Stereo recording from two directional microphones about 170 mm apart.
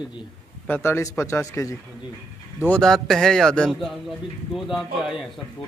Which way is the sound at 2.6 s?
5° left (ahead or behind).